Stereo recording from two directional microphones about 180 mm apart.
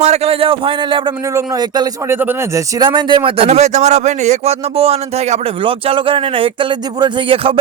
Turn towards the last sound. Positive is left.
turn(degrees=-30)  # may be behind; listen again after turning